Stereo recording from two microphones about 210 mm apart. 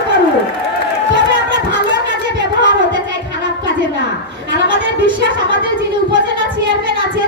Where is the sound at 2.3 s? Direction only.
20° right (ahead or behind).